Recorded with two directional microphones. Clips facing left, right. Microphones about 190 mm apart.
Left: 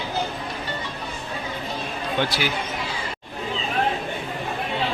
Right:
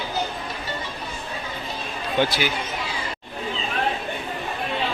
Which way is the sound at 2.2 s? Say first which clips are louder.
Right 3 dB; centre (ahead or behind).